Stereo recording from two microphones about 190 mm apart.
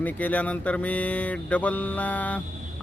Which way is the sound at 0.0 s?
10° left (ahead or behind).